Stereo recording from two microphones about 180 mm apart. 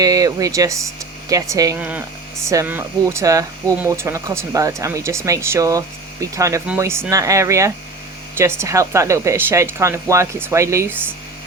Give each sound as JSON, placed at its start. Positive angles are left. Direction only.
{"t": 0.0, "sound": "speech", "side_deg": -20}